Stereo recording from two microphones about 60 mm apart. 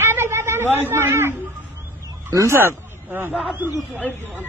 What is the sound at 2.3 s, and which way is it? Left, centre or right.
Speech, right.